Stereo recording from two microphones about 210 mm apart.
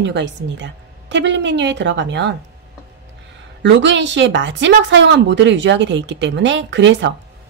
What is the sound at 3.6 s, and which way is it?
Speech, 60° right (ahead or behind).